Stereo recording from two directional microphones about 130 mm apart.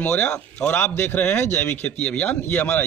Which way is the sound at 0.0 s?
10° left (ahead or behind).